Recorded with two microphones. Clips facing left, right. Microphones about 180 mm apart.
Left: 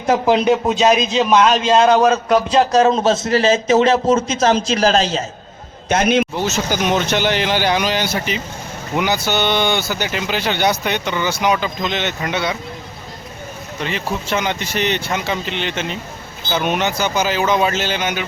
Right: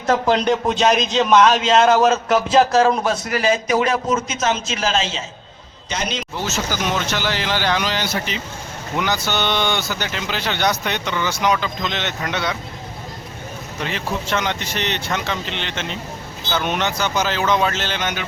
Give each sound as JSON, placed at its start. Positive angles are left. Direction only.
{"t": 0.0, "sound": "a man's voice", "side_deg": 10}
{"t": 2.7, "sound": "a man's voice", "side_deg": 20}
{"t": 5.9, "sound": "speech", "side_deg": 55}
{"t": 6.3, "sound": "speech", "side_deg": 15}
{"t": 13.8, "sound": "speech", "side_deg": 5}